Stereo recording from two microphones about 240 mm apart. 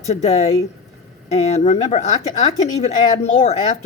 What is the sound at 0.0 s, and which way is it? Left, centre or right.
Speech, left.